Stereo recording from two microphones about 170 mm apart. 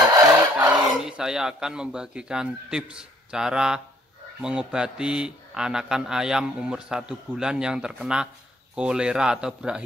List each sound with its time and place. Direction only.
0.1 s crowing: 20° right (ahead or behind)
0.7 s speech: 5° right (ahead or behind)